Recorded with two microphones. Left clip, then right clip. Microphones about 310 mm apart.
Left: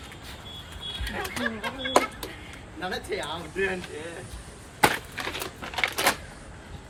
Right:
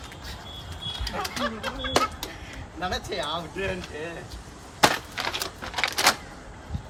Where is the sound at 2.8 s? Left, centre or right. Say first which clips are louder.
Right 2 dB; centre.